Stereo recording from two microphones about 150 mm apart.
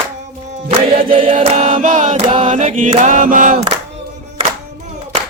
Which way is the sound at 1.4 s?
45° right (ahead or behind).